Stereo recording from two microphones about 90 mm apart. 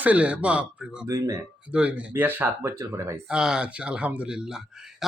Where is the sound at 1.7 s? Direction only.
15° right (ahead or behind).